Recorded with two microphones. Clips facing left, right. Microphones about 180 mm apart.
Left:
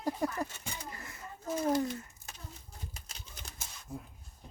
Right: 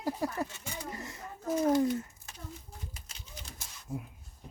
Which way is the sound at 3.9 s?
10° right (ahead or behind).